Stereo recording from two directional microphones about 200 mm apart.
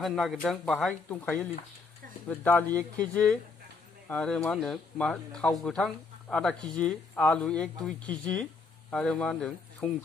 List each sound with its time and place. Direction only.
0.0 s speech: centre (ahead or behind)